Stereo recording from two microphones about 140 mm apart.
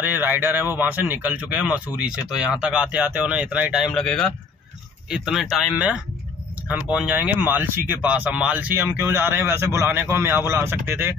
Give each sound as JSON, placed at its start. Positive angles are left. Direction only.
{"t": 0.0, "sound": "speech", "side_deg": -15}
{"t": 3.8, "sound": "speech", "side_deg": 5}